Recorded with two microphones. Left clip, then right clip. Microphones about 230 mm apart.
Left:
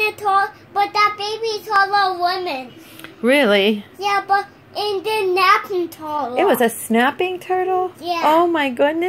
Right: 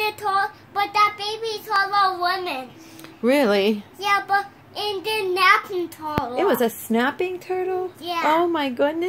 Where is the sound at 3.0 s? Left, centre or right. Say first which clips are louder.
Left 4 dB; centre.